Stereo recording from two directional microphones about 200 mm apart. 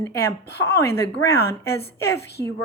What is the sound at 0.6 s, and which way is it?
A woman's voice, 15° left (ahead or behind).